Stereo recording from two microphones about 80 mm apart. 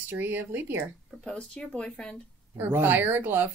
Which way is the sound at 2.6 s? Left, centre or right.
Right.